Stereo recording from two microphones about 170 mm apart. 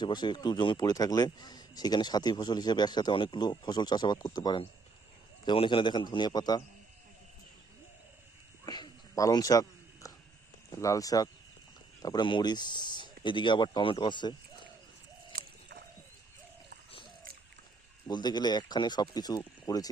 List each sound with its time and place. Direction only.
0.0 s a man's voice: 25° left (ahead or behind)
8.6 s whispering: 25° left (ahead or behind)
10.8 s a man's voice: 20° left (ahead or behind)
15.3 s a sound: 60° right (ahead or behind)
18.1 s a man's voice: 25° left (ahead or behind)